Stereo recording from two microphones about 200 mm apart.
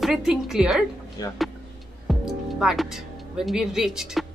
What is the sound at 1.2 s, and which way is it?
Speech, 20° left (ahead or behind).